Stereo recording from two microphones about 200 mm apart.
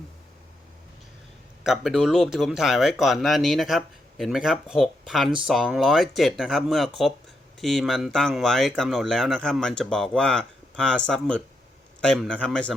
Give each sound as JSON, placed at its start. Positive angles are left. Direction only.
{"t": 1.6, "sound": "speech", "side_deg": 0}